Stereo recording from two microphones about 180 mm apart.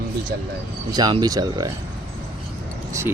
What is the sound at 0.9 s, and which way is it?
Speech, 25° right (ahead or behind).